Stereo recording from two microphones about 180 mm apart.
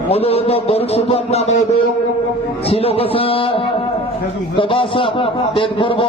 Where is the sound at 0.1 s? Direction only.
35° left (ahead or behind).